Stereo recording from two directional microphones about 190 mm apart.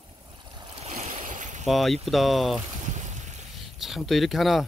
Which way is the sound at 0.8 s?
40° right (ahead or behind).